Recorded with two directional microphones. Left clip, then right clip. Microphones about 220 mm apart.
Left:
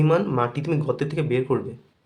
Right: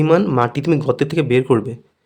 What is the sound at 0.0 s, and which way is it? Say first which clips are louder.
Speech: right 6 dB; 35° right (ahead or behind).